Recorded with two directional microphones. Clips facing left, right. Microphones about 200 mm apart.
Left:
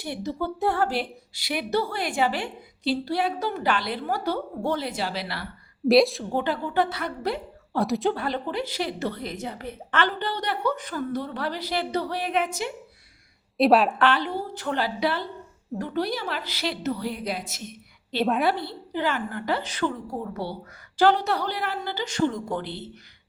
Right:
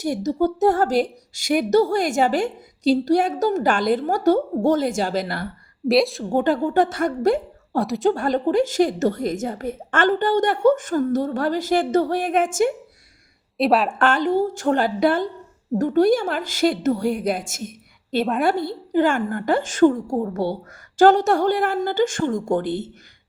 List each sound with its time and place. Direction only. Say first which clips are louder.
0.0 s speech: right 9 dB; 45° right (ahead or behind)
5.9 s a woman's voice: even; centre (ahead or behind)
6.3 s speech: right 9 dB; 45° right (ahead or behind)
7.8 s a woman's voice: right 4 dB; centre (ahead or behind)
8.1 s speech: right 9 dB; 45° right (ahead or behind)
13.6 s a woman's voice: even; centre (ahead or behind)
14.0 s speech: right 5 dB; 45° right (ahead or behind)
18.2 s a woman's voice: right 2 dB; centre (ahead or behind)
18.4 s speech: right 4 dB; 45° right (ahead or behind)